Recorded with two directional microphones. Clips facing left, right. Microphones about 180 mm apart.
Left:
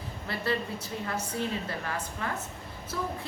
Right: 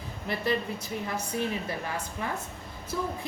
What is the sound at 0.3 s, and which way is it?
A woman's voice, 15° right (ahead or behind).